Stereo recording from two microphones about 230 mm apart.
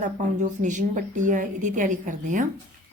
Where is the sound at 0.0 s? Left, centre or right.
Right.